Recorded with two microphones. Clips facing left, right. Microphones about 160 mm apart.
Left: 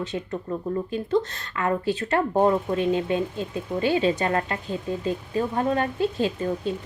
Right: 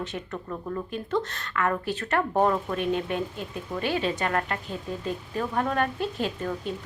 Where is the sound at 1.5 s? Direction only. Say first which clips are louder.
Left 3 dB; 25° left (ahead or behind).